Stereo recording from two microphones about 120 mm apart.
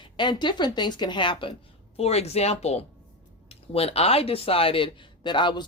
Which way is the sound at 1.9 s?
60° left (ahead or behind).